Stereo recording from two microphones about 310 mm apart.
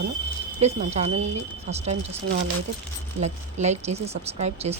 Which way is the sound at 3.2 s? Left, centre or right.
Right.